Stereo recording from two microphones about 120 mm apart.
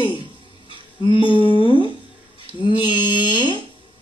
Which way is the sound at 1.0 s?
45° left (ahead or behind).